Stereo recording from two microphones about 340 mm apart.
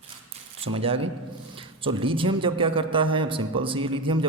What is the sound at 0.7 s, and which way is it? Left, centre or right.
A man's voice, centre.